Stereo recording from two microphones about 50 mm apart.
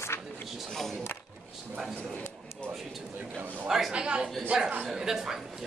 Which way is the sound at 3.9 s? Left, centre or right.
Centre.